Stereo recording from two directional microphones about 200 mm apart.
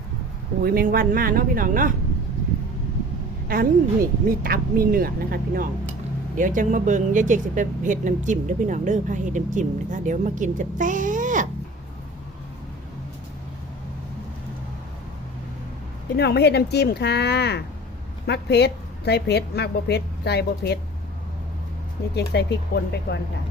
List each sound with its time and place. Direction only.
0.6 s speech: 45° right (ahead or behind)
3.5 s speech: 45° right (ahead or behind)
16.1 s a woman's voice: 55° left (ahead or behind)
22.1 s a woman's voice: 55° left (ahead or behind)